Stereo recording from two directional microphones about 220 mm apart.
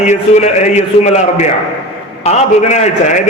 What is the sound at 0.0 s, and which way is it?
A man's voice, 30° left (ahead or behind).